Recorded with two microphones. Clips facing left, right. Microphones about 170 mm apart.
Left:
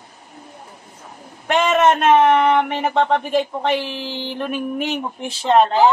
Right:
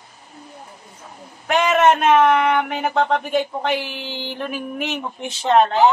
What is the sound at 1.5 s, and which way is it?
Speech, centre (ahead or behind).